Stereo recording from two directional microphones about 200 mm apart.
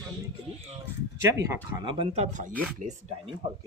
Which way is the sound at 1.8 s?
25° right (ahead or behind).